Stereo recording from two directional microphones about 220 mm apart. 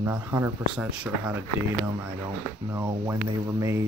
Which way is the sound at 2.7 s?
15° right (ahead or behind).